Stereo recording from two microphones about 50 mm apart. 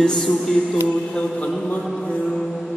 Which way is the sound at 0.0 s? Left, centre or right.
Centre.